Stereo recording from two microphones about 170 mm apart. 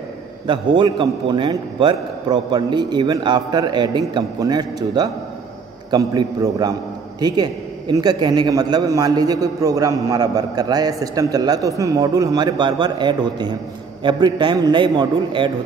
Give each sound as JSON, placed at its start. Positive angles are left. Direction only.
{"t": 0.5, "sound": "a man's voice", "side_deg": -30}